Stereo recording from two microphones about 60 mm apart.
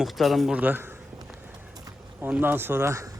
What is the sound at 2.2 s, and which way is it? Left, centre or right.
Speech, right.